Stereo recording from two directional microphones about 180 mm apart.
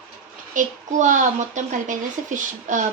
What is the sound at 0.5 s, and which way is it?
A child's voice, 45° right (ahead or behind).